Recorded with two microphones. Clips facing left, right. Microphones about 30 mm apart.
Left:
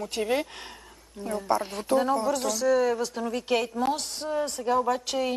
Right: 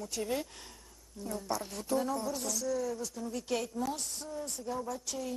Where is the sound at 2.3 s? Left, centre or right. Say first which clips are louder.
Left 11 dB; left.